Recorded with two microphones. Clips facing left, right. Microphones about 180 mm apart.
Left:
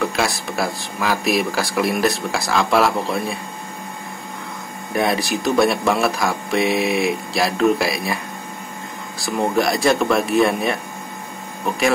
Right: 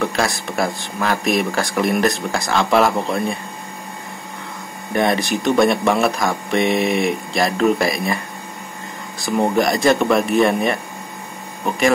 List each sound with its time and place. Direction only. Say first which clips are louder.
0.0 s speech: right 1 dB; centre (ahead or behind)
4.9 s speech: right 2 dB; centre (ahead or behind)
9.2 s speech: right 2 dB; centre (ahead or behind)